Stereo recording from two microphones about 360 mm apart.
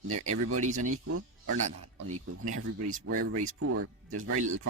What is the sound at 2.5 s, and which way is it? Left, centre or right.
Speech, right.